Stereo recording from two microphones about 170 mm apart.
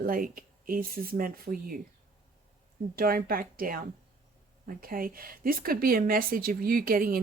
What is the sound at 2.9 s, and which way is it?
Speech, 60° right (ahead or behind).